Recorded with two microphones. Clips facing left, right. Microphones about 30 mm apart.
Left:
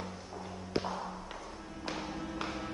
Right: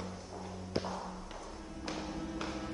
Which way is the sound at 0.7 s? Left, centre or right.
Centre.